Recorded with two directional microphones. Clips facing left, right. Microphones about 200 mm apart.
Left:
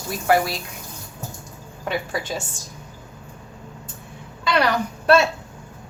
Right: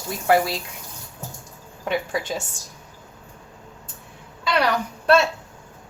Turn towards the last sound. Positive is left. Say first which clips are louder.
# left 1 dB
turn(degrees=0)  # may be behind; listen again after turning